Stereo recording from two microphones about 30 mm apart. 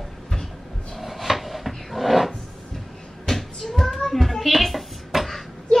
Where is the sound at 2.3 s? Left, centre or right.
Centre.